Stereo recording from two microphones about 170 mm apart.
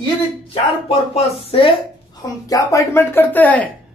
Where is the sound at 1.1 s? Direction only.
35° left (ahead or behind).